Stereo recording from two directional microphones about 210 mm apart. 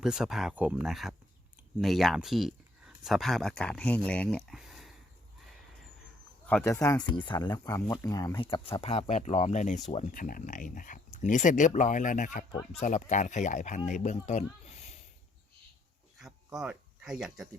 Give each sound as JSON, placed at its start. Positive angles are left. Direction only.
{"t": 0.0, "sound": "speech", "side_deg": 0}
{"t": 6.5, "sound": "speech", "side_deg": 5}
{"t": 16.1, "sound": "a sound", "side_deg": 0}